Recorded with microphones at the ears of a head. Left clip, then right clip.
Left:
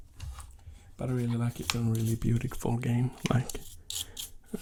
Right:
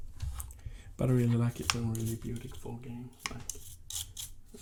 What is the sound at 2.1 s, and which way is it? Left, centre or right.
Speech, left.